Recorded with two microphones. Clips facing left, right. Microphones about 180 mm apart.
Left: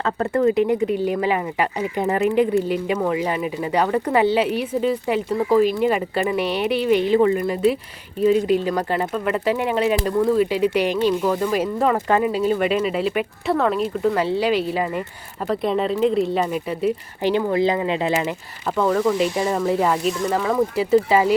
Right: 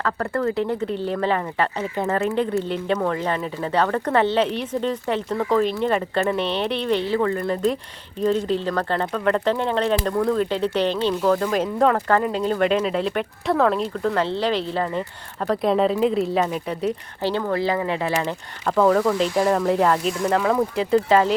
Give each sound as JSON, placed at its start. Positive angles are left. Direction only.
{"t": 0.0, "sound": "speech", "side_deg": 20}
{"t": 15.4, "sound": "speech", "side_deg": 0}
{"t": 17.2, "sound": "speech", "side_deg": 15}
{"t": 18.6, "sound": "speech", "side_deg": 0}